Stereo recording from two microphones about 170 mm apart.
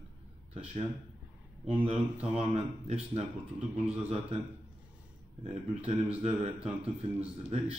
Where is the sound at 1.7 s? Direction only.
35° right (ahead or behind).